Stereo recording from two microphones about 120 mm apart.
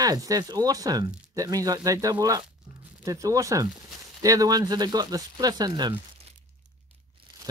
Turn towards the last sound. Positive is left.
turn(degrees=-35)  # may be behind; listen again after turning